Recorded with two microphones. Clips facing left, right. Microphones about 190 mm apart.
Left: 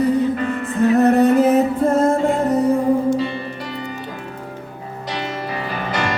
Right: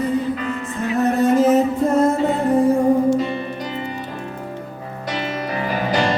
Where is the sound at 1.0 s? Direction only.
65° left (ahead or behind).